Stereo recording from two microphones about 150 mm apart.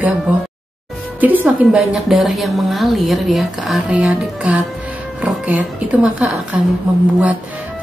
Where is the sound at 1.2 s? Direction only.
10° right (ahead or behind).